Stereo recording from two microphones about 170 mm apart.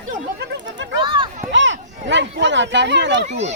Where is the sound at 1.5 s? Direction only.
90° right.